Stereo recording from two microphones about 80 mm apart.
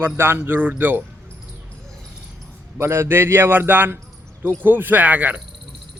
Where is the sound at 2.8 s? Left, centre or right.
Right.